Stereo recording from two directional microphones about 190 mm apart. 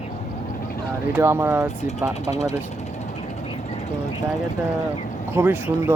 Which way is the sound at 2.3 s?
35° left (ahead or behind).